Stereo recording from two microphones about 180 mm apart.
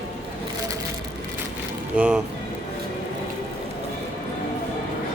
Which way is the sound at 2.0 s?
5° right (ahead or behind).